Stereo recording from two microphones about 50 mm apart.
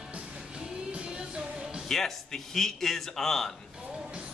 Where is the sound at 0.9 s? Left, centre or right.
Centre.